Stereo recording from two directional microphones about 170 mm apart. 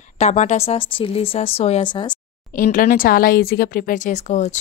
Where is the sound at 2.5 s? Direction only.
55° left (ahead or behind).